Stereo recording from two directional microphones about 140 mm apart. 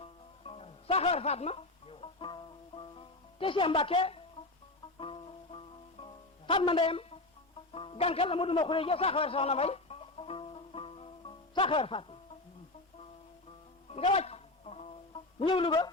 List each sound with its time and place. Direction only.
0.0 s music: 45° left (ahead or behind)
6.5 s a man's voice: 40° left (ahead or behind)
13.9 s music: 50° left (ahead or behind)
15.4 s speech: 40° left (ahead or behind)